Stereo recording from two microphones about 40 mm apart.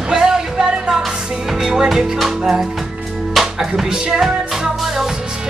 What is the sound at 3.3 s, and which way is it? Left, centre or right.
Speech, centre.